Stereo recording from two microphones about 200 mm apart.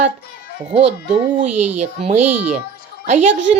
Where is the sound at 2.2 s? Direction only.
5° right (ahead or behind).